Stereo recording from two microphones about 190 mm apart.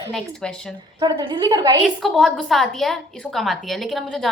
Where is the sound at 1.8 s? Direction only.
Centre (ahead or behind).